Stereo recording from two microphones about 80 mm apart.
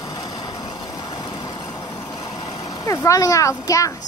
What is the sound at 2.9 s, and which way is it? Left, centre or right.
Speech, left.